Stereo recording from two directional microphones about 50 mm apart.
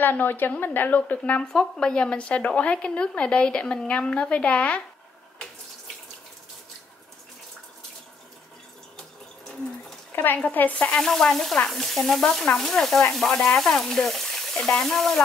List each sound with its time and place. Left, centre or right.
0.0 s a woman's voice: left
1.4 s speech: centre
10.1 s speech: left
11.0 s speech: centre
11.7 s sizzle: centre
12.4 s speech: centre